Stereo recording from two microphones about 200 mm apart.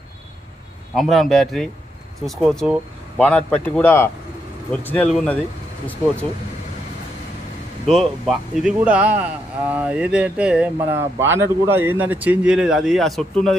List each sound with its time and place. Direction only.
0.9 s speech: centre (ahead or behind)
7.8 s speech: centre (ahead or behind)